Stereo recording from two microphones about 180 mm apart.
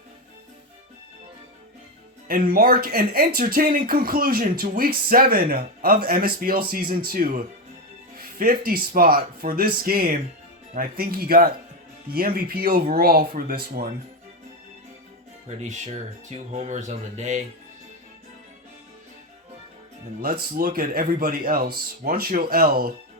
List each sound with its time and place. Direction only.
2.2 s speech: 55° right (ahead or behind)
15.4 s speech: 40° right (ahead or behind)
20.2 s speech: 55° right (ahead or behind)